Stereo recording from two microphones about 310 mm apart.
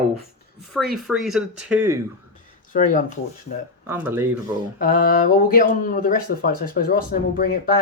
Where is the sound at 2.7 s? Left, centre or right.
Left.